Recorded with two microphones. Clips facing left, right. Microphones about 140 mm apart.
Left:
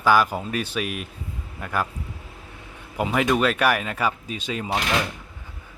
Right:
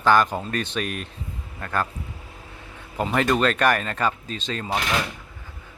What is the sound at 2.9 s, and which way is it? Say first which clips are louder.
Speech: even; 5° left (ahead or behind).